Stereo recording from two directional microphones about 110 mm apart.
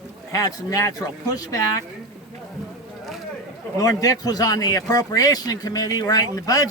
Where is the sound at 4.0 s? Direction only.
35° left (ahead or behind).